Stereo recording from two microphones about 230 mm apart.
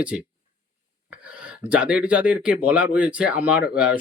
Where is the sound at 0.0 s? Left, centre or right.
Centre.